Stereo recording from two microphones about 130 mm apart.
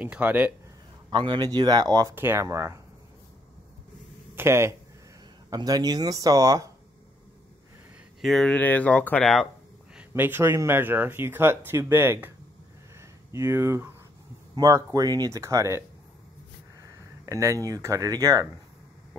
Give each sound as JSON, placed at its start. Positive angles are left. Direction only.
{"t": 0.0, "sound": "speech", "side_deg": -10}
{"t": 1.1, "sound": "speech", "side_deg": -35}
{"t": 2.1, "sound": "speech", "side_deg": -15}
{"t": 4.4, "sound": "speech", "side_deg": -20}
{"t": 8.2, "sound": "speech", "side_deg": 0}
{"t": 9.9, "sound": "speech", "side_deg": -15}
{"t": 13.3, "sound": "speech", "side_deg": -20}
{"t": 16.8, "sound": "a sound", "side_deg": -25}
{"t": 17.6, "sound": "speech", "side_deg": -25}